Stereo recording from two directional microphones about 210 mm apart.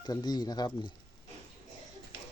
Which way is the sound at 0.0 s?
20° left (ahead or behind).